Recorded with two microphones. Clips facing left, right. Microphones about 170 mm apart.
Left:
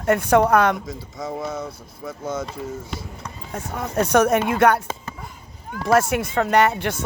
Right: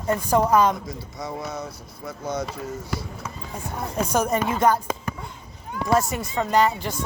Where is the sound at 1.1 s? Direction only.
50° left (ahead or behind).